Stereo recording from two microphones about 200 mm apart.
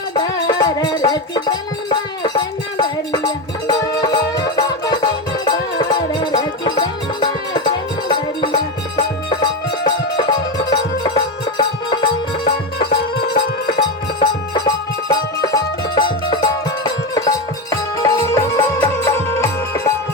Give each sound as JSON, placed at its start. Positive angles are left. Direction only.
{"t": 0.1, "sound": "music", "side_deg": 20}
{"t": 12.5, "sound": "music", "side_deg": 50}
{"t": 13.7, "sound": "music", "side_deg": 20}